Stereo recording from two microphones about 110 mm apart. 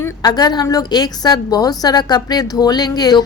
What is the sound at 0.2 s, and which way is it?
A woman's voice, 40° left (ahead or behind).